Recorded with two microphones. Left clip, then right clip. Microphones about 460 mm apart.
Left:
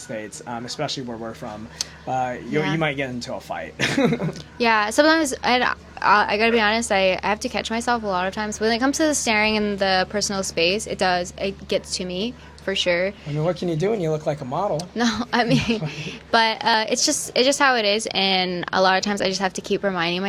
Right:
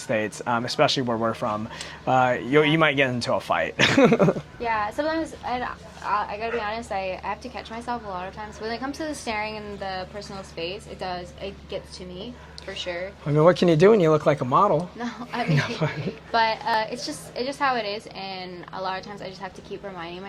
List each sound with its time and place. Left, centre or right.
0.1 s speech: centre
4.6 s a woman's voice: left
13.3 s speech: right
14.9 s a woman's voice: left